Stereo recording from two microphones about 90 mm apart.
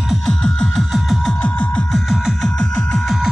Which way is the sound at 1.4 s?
15° left (ahead or behind).